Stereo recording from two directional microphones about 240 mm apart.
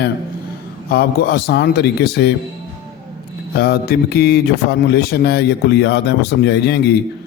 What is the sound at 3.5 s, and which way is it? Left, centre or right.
A man's voice, left.